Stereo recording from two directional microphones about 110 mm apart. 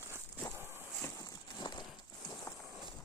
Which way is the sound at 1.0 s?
30° left (ahead or behind).